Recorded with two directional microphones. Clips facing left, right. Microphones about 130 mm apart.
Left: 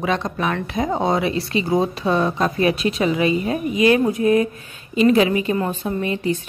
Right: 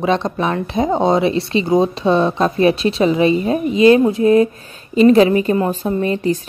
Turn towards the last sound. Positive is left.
turn(degrees=-40)  # may be behind; listen again after turning